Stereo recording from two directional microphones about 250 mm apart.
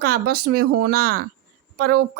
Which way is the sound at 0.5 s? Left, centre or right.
Right.